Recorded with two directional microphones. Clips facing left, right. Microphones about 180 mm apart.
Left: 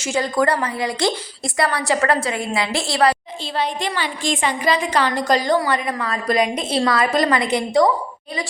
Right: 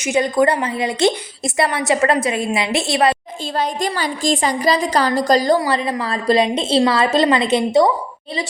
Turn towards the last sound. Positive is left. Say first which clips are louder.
# right 3 dB
turn(degrees=-25)  # may be behind; listen again after turning